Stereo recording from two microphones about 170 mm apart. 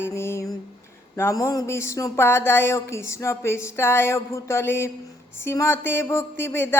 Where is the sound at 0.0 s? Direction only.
15° left (ahead or behind).